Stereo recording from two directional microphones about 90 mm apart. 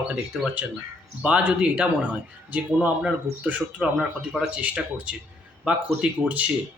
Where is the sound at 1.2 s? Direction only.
15° right (ahead or behind).